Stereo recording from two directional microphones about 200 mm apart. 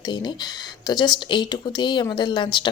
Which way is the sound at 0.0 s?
20° left (ahead or behind).